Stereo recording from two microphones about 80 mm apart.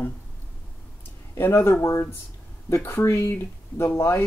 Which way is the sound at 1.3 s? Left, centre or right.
Left.